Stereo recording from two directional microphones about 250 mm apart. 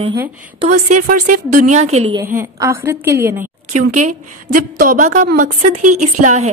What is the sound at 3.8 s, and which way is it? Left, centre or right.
A woman's voice, right.